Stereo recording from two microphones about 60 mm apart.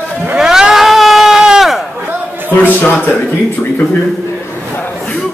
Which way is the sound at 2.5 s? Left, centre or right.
Left.